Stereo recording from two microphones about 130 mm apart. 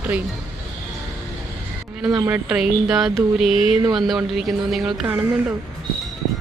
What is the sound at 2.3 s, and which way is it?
A woman's voice, 5° right (ahead or behind).